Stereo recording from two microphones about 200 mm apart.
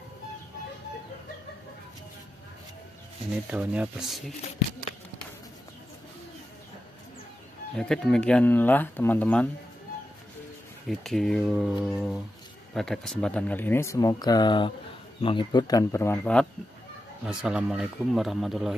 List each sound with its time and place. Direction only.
3.4 s speech: 5° right (ahead or behind)
7.7 s speech: 5° left (ahead or behind)
10.9 s speech: centre (ahead or behind)
17.3 s speech: 5° right (ahead or behind)